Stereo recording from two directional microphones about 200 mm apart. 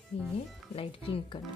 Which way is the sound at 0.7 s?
30° left (ahead or behind).